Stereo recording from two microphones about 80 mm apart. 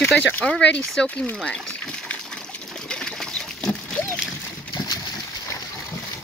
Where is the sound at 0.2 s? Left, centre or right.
Centre.